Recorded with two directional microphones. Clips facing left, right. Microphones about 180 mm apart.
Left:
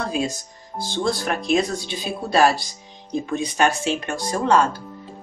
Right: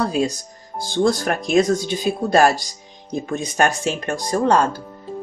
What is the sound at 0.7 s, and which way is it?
Speech, 45° right (ahead or behind).